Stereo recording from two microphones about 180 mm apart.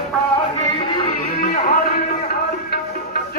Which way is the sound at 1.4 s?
55° left (ahead or behind).